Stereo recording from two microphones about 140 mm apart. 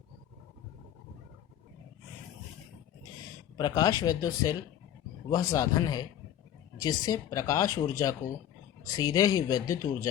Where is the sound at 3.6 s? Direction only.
25° left (ahead or behind).